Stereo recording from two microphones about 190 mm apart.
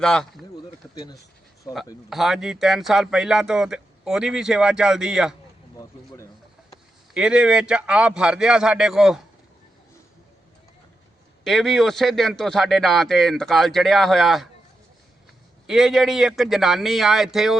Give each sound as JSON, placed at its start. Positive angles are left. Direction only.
{"t": 0.0, "sound": "speech", "side_deg": 5}
{"t": 0.5, "sound": "a sound", "side_deg": 20}
{"t": 2.0, "sound": "speech", "side_deg": 0}
{"t": 7.1, "sound": "speech", "side_deg": -5}
{"t": 11.4, "sound": "speech", "side_deg": 0}
{"t": 15.6, "sound": "speech", "side_deg": 0}